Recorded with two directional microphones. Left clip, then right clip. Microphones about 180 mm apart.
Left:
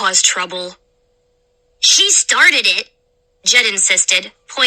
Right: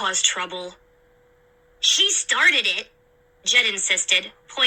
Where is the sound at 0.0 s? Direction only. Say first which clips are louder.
Left 7 dB; 35° left (ahead or behind).